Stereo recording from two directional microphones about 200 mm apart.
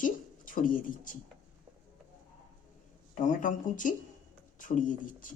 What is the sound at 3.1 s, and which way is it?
Speech, 40° left (ahead or behind).